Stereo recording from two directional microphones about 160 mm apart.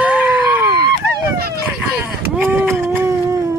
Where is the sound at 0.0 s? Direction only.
10° right (ahead or behind).